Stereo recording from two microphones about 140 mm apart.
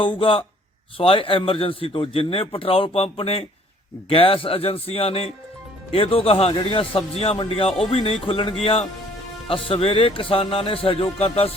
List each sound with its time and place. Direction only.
0.0 s speech: 40° left (ahead or behind)